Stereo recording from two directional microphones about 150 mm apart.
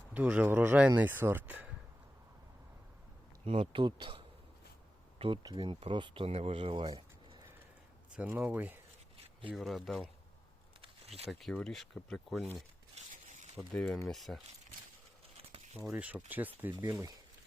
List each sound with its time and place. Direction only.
0.1 s speech: 10° right (ahead or behind)
3.4 s speech: 40° right (ahead or behind)
5.2 s speech: 30° right (ahead or behind)
6.9 s a sound: 30° right (ahead or behind)
8.1 s speech: 10° right (ahead or behind)
9.5 s speech: centre (ahead or behind)
11.3 s speech: centre (ahead or behind)
13.2 s a sound: 50° right (ahead or behind)
13.6 s speech: centre (ahead or behind)
15.9 s speech: 10° right (ahead or behind)